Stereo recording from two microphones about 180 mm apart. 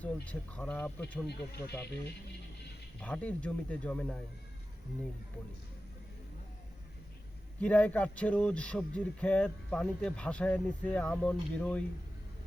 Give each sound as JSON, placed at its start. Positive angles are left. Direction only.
{"t": 0.0, "sound": "speech", "side_deg": 5}
{"t": 1.3, "sound": "speech", "side_deg": 65}
{"t": 3.0, "sound": "speech", "side_deg": 5}
{"t": 7.6, "sound": "speech", "side_deg": 10}